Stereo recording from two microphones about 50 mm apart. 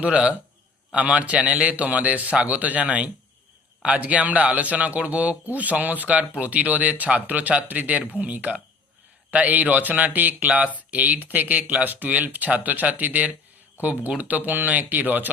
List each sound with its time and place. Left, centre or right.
0.0 s a man's voice: right